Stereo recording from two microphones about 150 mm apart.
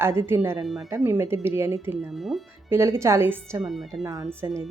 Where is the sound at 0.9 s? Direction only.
15° right (ahead or behind).